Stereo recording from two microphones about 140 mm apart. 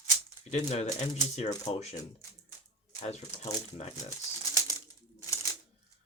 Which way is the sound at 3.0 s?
50° left (ahead or behind).